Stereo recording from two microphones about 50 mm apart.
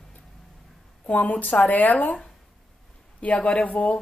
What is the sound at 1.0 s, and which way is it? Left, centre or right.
Speech, left.